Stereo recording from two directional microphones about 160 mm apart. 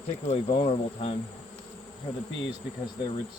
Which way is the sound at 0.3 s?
45° left (ahead or behind).